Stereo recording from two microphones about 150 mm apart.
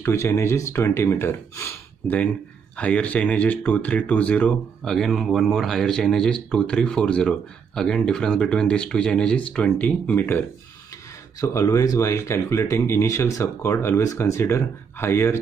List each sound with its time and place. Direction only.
0.0 s speech: 15° left (ahead or behind)